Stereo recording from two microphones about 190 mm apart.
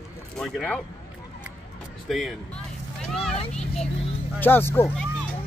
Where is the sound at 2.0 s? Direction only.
Centre (ahead or behind).